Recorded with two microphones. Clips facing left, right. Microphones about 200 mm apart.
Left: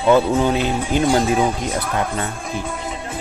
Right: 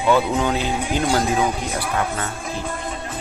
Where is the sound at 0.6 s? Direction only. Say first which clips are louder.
Left 3 dB; 15° right (ahead or behind).